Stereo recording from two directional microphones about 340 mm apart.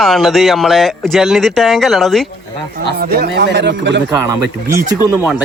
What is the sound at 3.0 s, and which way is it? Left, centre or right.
Speech, right.